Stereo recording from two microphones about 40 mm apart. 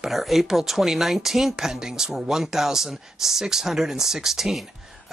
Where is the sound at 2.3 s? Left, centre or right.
Centre.